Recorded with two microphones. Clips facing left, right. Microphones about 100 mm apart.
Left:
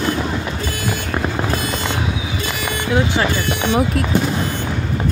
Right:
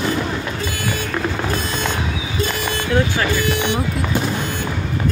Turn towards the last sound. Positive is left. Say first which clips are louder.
# left 1 dB
turn(degrees=20)  # may be behind; listen again after turning